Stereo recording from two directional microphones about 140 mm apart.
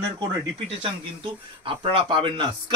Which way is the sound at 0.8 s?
40° right (ahead or behind).